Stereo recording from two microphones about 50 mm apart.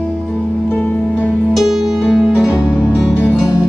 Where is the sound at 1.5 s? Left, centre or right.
Centre.